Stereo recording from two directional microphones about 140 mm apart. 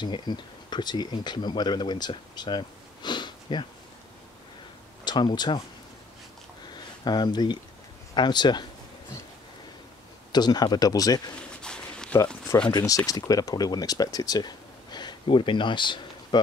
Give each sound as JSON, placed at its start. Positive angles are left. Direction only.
{"t": 0.0, "sound": "speech", "side_deg": 30}
{"t": 5.0, "sound": "speech", "side_deg": 30}
{"t": 6.7, "sound": "a sound", "side_deg": 30}
{"t": 8.1, "sound": "speech", "side_deg": 30}
{"t": 10.3, "sound": "speech", "side_deg": 30}
{"t": 11.6, "sound": "a sound", "side_deg": 5}
{"t": 12.7, "sound": "speech", "side_deg": 25}